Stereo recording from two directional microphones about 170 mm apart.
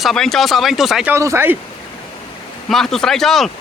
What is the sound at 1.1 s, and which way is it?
Speech, 15° right (ahead or behind).